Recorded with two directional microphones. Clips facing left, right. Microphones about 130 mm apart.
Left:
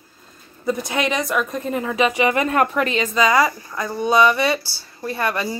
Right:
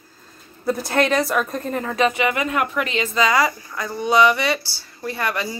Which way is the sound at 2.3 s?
35° left (ahead or behind).